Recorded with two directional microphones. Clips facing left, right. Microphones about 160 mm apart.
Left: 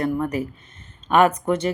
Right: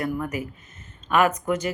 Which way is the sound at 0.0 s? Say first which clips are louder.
Left 4 dB; 30° left (ahead or behind).